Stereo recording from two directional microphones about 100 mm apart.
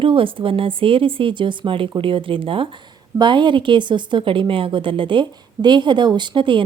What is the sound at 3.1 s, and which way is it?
A woman's voice, 50° right (ahead or behind).